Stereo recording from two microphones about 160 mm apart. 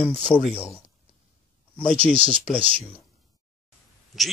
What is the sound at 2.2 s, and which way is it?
Speech, 50° left (ahead or behind).